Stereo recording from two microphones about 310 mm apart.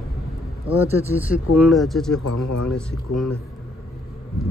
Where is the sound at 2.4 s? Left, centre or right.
Left.